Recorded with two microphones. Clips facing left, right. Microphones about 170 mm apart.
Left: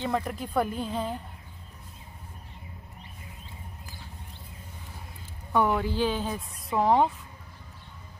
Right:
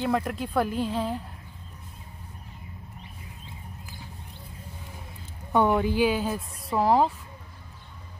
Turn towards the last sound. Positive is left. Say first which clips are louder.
# right 1 dB
turn(degrees=-5)  # may be behind; listen again after turning